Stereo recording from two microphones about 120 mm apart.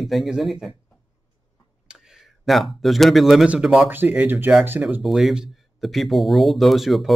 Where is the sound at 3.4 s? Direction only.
5° right (ahead or behind).